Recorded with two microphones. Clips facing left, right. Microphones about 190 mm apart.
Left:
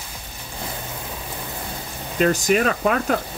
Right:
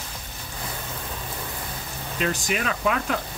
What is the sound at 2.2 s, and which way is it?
Speech, 45° left (ahead or behind).